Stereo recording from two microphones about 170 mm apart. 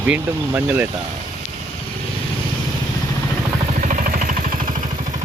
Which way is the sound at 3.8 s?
50° right (ahead or behind).